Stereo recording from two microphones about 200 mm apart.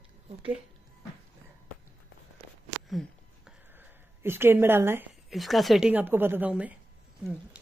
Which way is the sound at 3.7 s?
10° right (ahead or behind).